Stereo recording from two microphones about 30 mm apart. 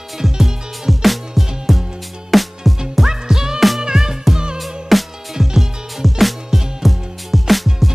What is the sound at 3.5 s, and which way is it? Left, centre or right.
Music, centre.